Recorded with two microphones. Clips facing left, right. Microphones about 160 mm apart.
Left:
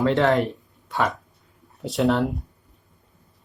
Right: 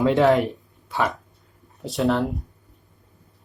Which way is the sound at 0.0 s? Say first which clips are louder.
Right 2 dB; 15° right (ahead or behind).